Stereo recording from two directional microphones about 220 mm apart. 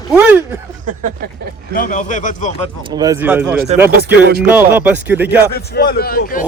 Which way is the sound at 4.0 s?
45° right (ahead or behind).